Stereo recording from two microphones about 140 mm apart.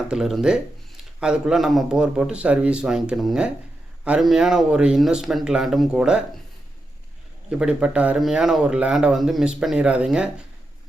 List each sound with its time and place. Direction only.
0.1 s speech: 5° right (ahead or behind)
7.6 s speech: 10° right (ahead or behind)